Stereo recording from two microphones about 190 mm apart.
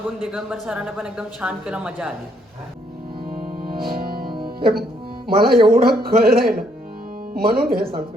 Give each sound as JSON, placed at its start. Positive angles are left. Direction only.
{"t": 0.3, "sound": "speech", "side_deg": 0}
{"t": 3.2, "sound": "music", "side_deg": -50}
{"t": 5.3, "sound": "a man's voice", "side_deg": -50}